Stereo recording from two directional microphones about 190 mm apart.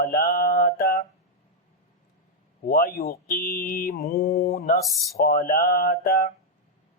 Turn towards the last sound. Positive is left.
turn(degrees=45)  # may be behind; listen again after turning